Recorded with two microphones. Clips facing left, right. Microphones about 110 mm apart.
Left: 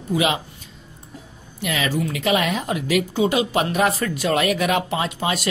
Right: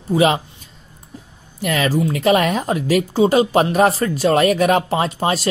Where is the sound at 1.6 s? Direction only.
45° right (ahead or behind).